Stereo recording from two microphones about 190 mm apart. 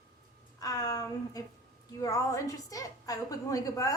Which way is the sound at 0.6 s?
20° left (ahead or behind).